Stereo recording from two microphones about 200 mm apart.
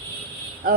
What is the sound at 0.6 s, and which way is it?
Speech, 50° right (ahead or behind).